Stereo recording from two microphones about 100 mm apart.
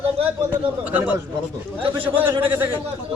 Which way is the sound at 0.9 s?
15° right (ahead or behind).